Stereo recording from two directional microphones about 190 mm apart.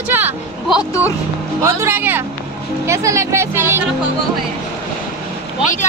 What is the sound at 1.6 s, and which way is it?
Speech, 10° right (ahead or behind).